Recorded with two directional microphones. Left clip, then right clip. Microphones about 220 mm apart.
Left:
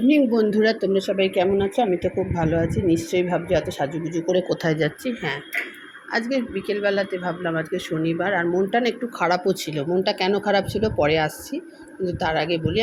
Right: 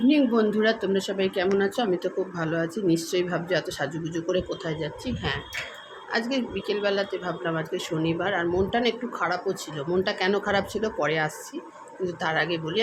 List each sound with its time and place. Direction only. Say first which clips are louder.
0.3 s speech: left 3 dB; 10° left (ahead or behind)
0.9 s speech: left 5 dB; centre (ahead or behind)
4.4 s speech: left 9 dB; 25° left (ahead or behind)
5.0 s speech: left 3 dB; 15° left (ahead or behind); by 9.8 s 30° left (ahead or behind)
9.9 s speech: left 3 dB; 15° left (ahead or behind)